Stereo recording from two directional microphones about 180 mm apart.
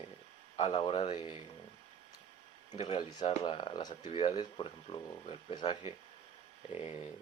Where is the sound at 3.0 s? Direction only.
25° left (ahead or behind).